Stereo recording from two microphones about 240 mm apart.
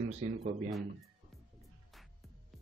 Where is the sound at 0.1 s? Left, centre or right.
Right.